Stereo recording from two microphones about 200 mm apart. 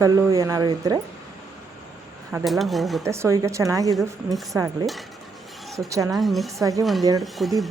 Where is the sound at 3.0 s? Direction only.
15° right (ahead or behind).